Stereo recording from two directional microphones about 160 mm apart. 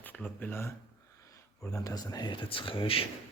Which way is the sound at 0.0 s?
10° left (ahead or behind).